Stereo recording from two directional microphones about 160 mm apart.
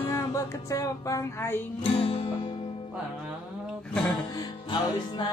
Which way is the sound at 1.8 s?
35° left (ahead or behind).